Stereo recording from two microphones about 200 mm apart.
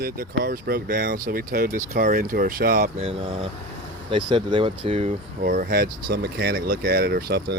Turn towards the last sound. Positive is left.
turn(degrees=-55)  # may be behind; listen again after turning